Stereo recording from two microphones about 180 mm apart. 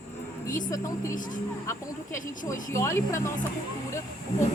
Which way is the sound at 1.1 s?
45° left (ahead or behind).